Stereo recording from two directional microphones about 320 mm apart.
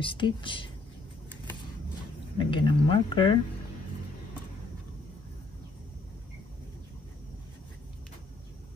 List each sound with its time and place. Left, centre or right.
0.0 s speech: centre
2.3 s speech: centre